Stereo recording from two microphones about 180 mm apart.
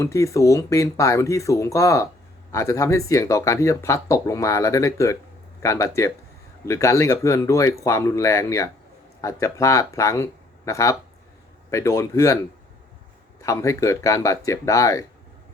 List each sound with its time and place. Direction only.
0.0 s speech: 15° left (ahead or behind)
13.4 s speech: 15° left (ahead or behind)